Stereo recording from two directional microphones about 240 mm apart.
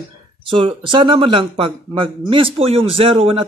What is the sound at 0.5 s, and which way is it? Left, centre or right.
A man's voice, right.